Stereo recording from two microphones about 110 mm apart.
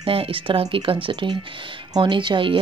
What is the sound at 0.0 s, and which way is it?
A woman's voice, 55° right (ahead or behind).